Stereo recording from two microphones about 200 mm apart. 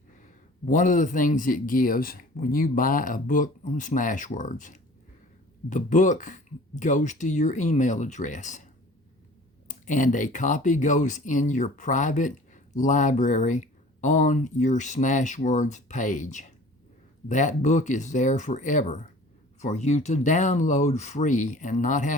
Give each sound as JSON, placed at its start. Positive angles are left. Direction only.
{"t": 0.7, "sound": "speech", "side_deg": 40}
{"t": 9.6, "sound": "speech", "side_deg": 40}